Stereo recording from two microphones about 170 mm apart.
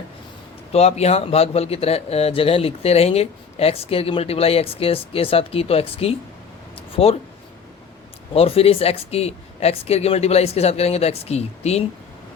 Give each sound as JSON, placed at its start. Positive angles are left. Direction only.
{"t": 0.7, "sound": "a man's voice", "side_deg": 40}
{"t": 6.7, "sound": "a sound", "side_deg": 35}
{"t": 8.3, "sound": "a man's voice", "side_deg": 35}